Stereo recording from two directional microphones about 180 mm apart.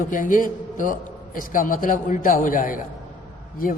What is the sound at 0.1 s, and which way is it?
A man's voice, 50° left (ahead or behind).